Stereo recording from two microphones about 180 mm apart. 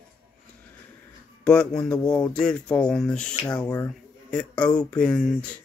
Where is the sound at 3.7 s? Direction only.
20° left (ahead or behind).